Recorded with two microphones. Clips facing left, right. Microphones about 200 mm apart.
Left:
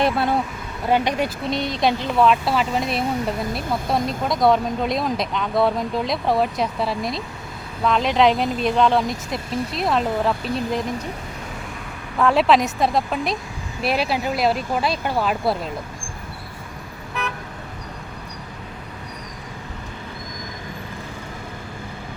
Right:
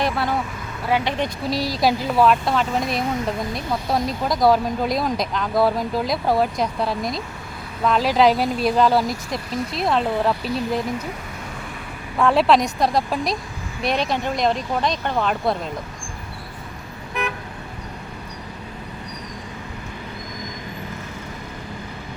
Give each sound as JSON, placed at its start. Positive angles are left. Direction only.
{"t": 0.0, "sound": "speech", "side_deg": 25}
{"t": 1.5, "sound": "speech", "side_deg": -5}
{"t": 12.1, "sound": "speech", "side_deg": 0}